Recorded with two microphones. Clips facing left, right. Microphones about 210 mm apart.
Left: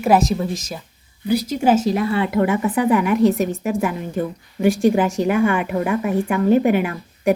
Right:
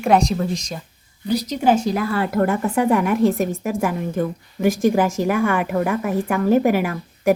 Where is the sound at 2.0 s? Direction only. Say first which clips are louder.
Left 2 dB; 25° left (ahead or behind).